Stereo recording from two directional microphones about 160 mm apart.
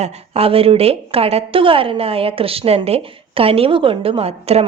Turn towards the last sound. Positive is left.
turn(degrees=-40)  # may be behind; listen again after turning